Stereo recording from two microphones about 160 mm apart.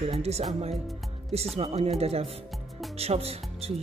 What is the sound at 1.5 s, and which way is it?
Speech, 40° right (ahead or behind).